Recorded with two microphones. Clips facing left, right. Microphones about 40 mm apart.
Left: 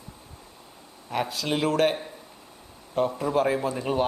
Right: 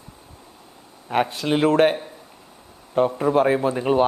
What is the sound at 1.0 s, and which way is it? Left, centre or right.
Speech, right.